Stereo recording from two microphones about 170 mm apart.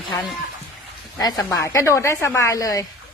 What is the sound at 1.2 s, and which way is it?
A woman's voice, 20° left (ahead or behind).